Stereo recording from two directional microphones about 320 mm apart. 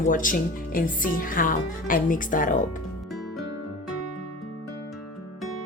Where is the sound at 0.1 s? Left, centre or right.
Left.